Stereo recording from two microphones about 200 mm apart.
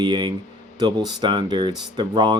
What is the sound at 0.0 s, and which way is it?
Speech, 20° right (ahead or behind).